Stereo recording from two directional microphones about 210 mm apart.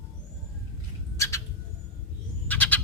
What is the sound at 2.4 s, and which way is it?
Owl, 10° left (ahead or behind).